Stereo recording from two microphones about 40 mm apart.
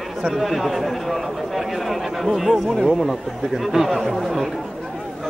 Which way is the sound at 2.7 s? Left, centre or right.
Centre.